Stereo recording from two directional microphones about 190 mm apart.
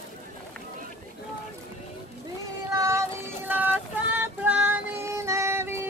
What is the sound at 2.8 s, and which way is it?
Child singing, 15° right (ahead or behind).